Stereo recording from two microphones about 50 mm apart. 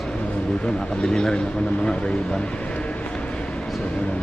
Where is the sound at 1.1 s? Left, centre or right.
Centre.